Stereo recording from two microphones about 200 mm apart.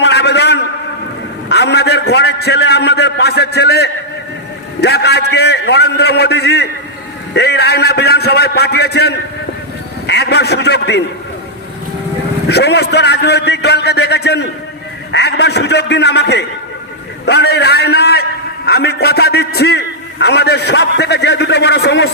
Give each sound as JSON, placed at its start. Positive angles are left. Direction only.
{"t": 0.0, "sound": "a sound", "side_deg": 55}
{"t": 1.5, "sound": "a man's voice", "side_deg": 55}
{"t": 12.5, "sound": "a man's voice", "side_deg": 55}